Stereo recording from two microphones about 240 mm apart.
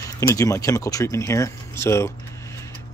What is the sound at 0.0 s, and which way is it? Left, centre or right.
Speech, centre.